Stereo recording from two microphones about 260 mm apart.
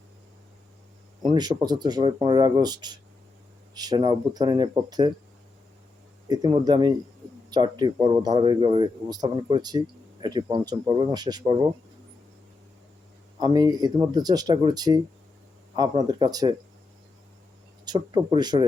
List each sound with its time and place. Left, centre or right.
1.2 s speech: centre
6.2 s speech: centre
13.4 s speech: centre
17.8 s speech: centre